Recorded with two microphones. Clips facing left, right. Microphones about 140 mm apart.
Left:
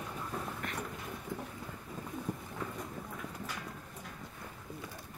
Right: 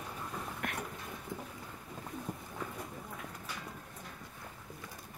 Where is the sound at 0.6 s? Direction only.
60° right (ahead or behind).